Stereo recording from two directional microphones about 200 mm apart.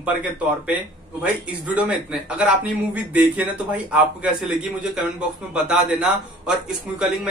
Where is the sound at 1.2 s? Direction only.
5° right (ahead or behind).